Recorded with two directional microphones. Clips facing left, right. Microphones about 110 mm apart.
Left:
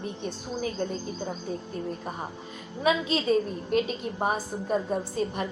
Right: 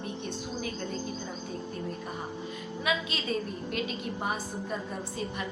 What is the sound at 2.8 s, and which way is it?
A woman's voice, 35° left (ahead or behind).